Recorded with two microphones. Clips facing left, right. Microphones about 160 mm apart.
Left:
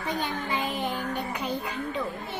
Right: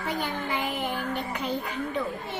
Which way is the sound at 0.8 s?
20° left (ahead or behind).